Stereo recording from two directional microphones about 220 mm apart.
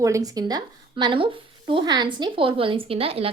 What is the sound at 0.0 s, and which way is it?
Speech, 15° right (ahead or behind).